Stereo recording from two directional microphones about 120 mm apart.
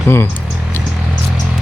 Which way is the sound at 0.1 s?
20° left (ahead or behind).